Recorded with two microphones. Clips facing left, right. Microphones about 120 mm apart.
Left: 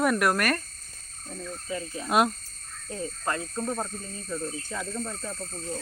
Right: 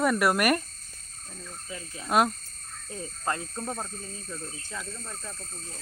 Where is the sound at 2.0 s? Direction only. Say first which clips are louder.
Even; centre (ahead or behind).